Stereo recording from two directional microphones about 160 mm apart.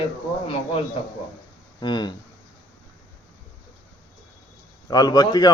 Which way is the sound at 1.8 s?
30° left (ahead or behind).